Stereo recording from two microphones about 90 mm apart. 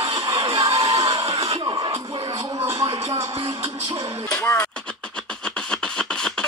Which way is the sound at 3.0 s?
30° right (ahead or behind).